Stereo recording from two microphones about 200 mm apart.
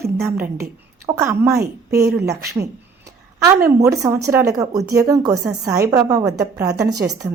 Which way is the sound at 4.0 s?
15° right (ahead or behind).